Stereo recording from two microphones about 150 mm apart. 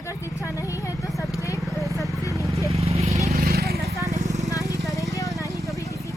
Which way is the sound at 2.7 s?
45° right (ahead or behind).